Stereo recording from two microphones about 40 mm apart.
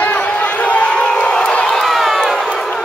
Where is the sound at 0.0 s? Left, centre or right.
Left.